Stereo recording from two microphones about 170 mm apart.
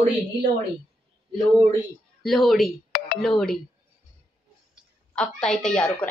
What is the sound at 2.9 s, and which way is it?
Telephone, 65° left (ahead or behind).